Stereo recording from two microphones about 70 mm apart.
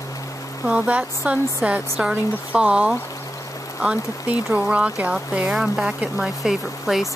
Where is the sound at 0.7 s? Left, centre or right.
Centre.